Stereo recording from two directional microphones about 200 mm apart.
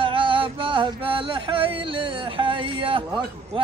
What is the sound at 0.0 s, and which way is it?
Music, 25° right (ahead or behind).